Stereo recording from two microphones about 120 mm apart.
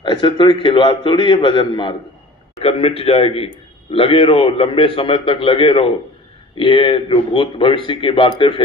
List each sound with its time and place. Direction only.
0.0 s a man's voice: 40° left (ahead or behind)
2.6 s a man's voice: 55° left (ahead or behind)